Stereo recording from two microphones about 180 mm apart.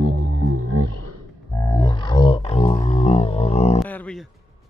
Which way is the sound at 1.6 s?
20° left (ahead or behind).